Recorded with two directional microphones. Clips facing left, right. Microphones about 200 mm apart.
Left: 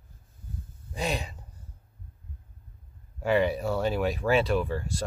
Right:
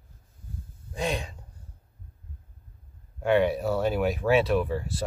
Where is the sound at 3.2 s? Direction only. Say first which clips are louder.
Right 2 dB; centre (ahead or behind).